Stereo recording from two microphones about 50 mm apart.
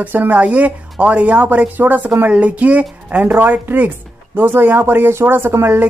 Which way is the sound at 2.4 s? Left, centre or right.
Right.